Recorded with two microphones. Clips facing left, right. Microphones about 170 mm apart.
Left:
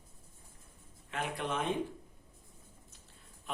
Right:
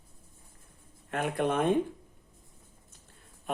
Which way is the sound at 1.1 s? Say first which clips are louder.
Right 7 dB; 50° right (ahead or behind).